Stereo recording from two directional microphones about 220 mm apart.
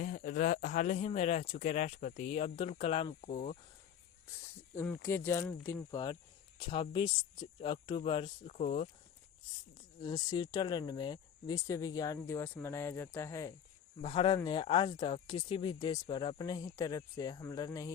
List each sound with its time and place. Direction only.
0.0 s speech: 40° left (ahead or behind)
4.3 s speech: 10° left (ahead or behind); by 8.9 s 30° left (ahead or behind)
9.7 s speech: 20° left (ahead or behind)